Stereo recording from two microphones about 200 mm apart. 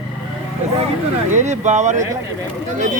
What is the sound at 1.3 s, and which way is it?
Speech, 35° right (ahead or behind).